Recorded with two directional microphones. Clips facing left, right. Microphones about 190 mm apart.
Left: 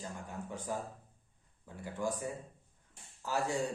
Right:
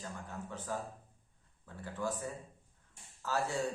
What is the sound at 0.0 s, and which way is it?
A man's voice, 15° left (ahead or behind).